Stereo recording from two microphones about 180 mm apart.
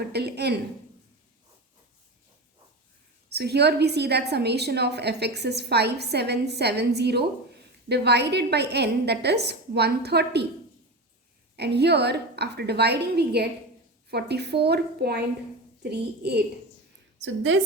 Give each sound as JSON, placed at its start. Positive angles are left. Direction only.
{"t": 0.1, "sound": "a woman's voice", "side_deg": -65}
{"t": 3.3, "sound": "a woman's voice", "side_deg": -65}
{"t": 11.5, "sound": "a woman's voice", "side_deg": -65}
{"t": 17.2, "sound": "a woman's voice", "side_deg": -90}